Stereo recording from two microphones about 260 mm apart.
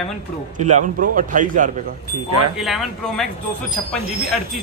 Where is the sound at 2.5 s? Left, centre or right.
Centre.